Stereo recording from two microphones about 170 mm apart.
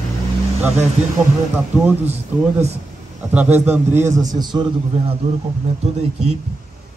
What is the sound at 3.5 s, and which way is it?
Speech, 10° right (ahead or behind).